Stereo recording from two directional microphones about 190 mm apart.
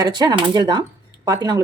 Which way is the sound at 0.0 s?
20° right (ahead or behind).